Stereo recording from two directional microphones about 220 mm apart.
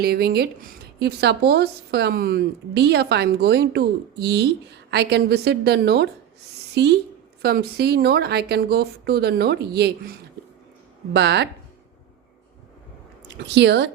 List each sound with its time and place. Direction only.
0.0 s a woman's voice: 45° right (ahead or behind)
11.1 s a woman's voice: 50° right (ahead or behind)
13.2 s speech: 50° right (ahead or behind)